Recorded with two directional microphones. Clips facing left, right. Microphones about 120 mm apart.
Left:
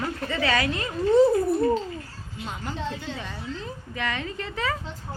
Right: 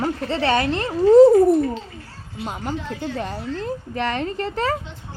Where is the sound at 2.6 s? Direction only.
60° right (ahead or behind).